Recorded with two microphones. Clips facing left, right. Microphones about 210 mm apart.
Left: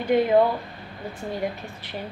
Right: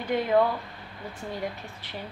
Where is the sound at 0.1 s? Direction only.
20° left (ahead or behind).